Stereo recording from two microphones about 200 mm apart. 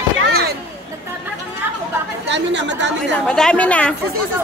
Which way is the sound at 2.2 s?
65° right (ahead or behind).